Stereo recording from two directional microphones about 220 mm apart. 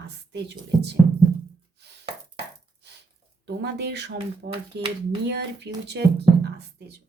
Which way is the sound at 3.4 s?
50° right (ahead or behind).